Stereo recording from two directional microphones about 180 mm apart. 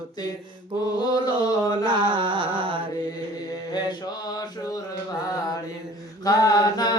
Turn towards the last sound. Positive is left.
turn(degrees=20)  # may be behind; listen again after turning